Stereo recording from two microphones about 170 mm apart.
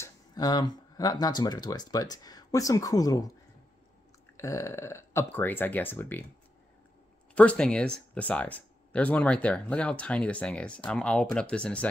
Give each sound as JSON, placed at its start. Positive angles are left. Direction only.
{"t": 0.0, "sound": "speech", "side_deg": 20}
{"t": 4.4, "sound": "speech", "side_deg": 15}
{"t": 7.3, "sound": "speech", "side_deg": 5}